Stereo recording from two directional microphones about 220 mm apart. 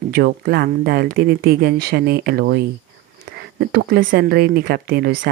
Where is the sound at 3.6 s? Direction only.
45° right (ahead or behind).